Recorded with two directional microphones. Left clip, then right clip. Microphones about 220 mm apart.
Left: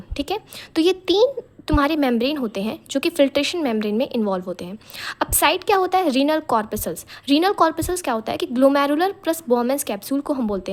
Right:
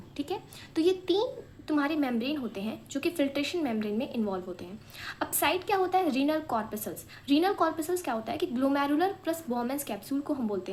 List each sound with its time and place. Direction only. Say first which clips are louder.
0.2 s speech: left 10 dB; 50° left (ahead or behind)